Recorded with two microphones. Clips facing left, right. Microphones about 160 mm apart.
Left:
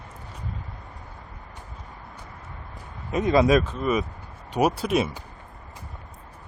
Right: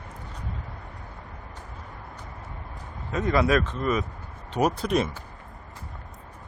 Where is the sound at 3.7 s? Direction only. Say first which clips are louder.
Left 2 dB; 10° left (ahead or behind).